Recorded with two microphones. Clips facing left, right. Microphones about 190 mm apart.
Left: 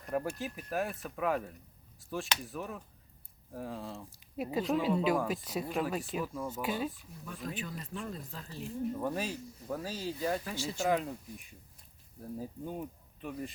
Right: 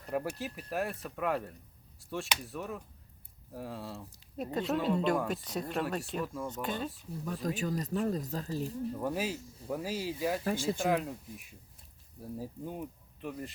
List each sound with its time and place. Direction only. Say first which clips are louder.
0.1 s speech: even; centre (ahead or behind)
7.3 s speech: right 6 dB; 40° right (ahead or behind)
9.0 s speech: right 1 dB; 5° right (ahead or behind)
10.4 s speech: right 6 dB; 50° right (ahead or behind)
10.8 s speech: even; centre (ahead or behind)